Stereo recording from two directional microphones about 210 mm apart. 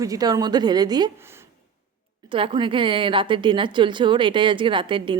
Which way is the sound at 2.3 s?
25° right (ahead or behind).